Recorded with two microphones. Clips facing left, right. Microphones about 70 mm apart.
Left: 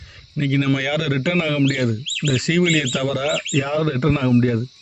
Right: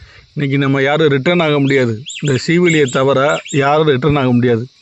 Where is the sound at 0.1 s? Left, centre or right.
Right.